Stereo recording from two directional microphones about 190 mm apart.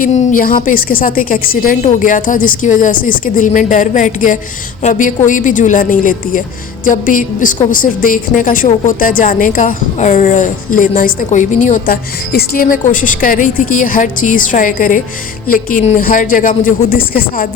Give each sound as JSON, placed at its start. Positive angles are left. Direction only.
{"t": 0.0, "sound": "a woman's voice", "side_deg": 40}